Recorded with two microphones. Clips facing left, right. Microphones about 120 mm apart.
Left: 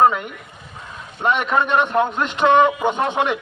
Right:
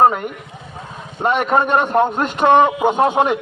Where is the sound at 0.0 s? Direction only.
40° right (ahead or behind).